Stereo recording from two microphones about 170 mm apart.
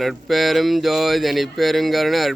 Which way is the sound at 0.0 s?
Centre (ahead or behind).